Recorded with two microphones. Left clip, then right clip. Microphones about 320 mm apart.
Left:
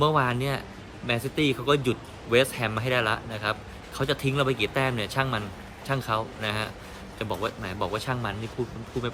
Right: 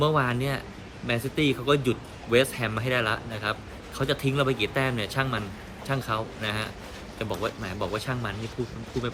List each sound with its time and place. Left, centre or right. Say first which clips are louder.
0.0 s speech: left 1 dB; centre